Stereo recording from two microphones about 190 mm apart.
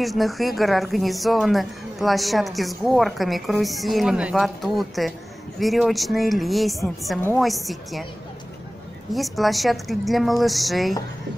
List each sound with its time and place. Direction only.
0.0 s a woman's voice: centre (ahead or behind)
9.1 s a woman's voice: centre (ahead or behind)